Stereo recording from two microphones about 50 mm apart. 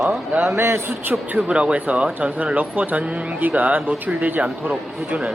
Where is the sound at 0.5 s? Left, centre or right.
Right.